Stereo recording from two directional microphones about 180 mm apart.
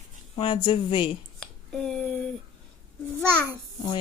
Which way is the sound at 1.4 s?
5° left (ahead or behind).